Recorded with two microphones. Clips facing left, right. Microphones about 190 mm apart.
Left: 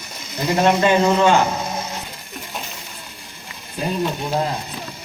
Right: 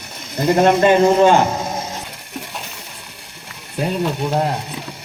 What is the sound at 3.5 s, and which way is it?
Speech, 70° right (ahead or behind).